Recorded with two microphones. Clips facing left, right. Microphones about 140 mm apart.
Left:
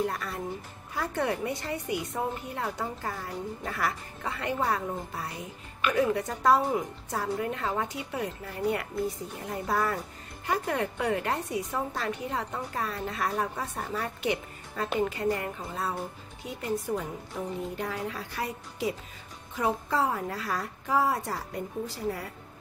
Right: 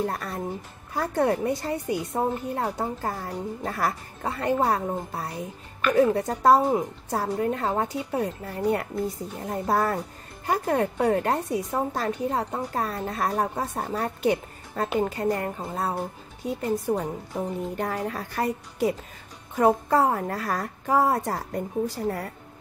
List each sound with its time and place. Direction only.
0.0 s a woman's voice: 40° right (ahead or behind)
17.7 s a woman's voice: 50° right (ahead or behind)